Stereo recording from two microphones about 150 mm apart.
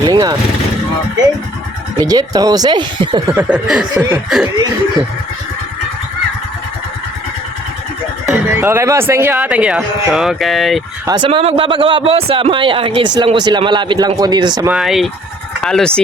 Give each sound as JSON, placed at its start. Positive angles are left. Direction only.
{"t": 0.0, "sound": "vehicle", "side_deg": -30}
{"t": 2.0, "sound": "speech", "side_deg": -25}
{"t": 3.3, "sound": "snicker", "side_deg": -5}
{"t": 8.3, "sound": "speech", "side_deg": -15}
{"t": 11.0, "sound": "speech", "side_deg": -25}
{"t": 11.3, "sound": "a man's voice", "side_deg": -40}
{"t": 14.7, "sound": "snicker", "side_deg": 0}